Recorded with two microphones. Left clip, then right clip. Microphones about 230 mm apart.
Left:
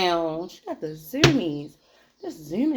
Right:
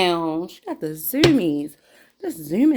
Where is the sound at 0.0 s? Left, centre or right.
Right.